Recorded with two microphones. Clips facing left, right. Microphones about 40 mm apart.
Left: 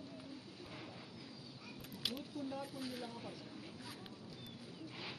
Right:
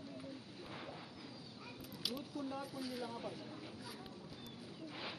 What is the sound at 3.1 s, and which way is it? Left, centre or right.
Speech, centre.